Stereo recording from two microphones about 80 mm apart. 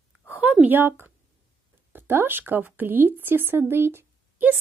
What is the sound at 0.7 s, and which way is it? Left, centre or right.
A woman's voice, right.